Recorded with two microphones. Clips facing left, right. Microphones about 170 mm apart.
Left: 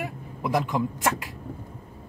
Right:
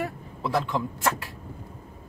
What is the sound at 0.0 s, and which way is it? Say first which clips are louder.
Speech: right 1 dB; 15° left (ahead or behind).